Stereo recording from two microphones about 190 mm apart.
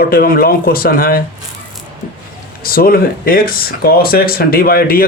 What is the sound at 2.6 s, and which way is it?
Speech, 50° left (ahead or behind).